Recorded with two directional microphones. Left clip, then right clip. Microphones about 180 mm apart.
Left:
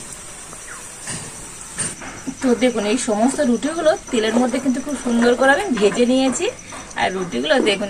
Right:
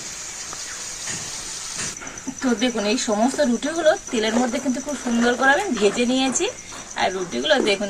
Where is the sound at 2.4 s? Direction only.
5° right (ahead or behind).